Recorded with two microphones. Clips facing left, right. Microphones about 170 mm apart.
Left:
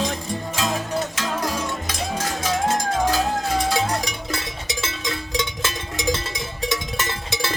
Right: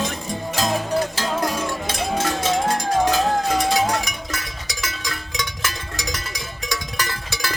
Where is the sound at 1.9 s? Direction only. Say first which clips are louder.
Right 4 dB; 25° right (ahead or behind).